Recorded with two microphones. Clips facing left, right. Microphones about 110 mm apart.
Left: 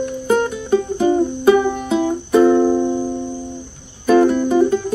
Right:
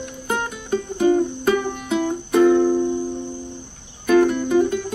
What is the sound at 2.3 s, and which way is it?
Music, 35° left (ahead or behind).